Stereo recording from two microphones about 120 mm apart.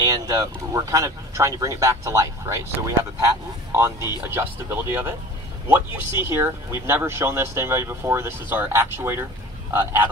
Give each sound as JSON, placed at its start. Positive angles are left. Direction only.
{"t": 0.0, "sound": "speech", "side_deg": -30}
{"t": 6.2, "sound": "speech", "side_deg": -20}